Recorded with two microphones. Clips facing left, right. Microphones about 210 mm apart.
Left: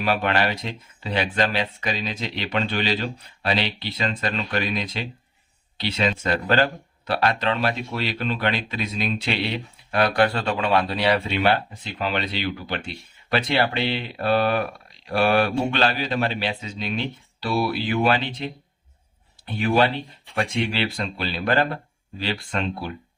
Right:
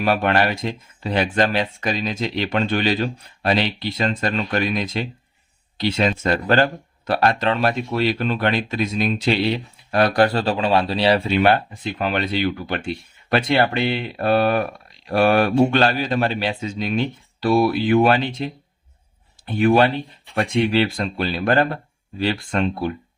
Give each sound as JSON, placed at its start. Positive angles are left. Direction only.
{"t": 0.0, "sound": "speech", "side_deg": -50}
{"t": 11.3, "sound": "speech", "side_deg": -50}
{"t": 19.5, "sound": "speech", "side_deg": -50}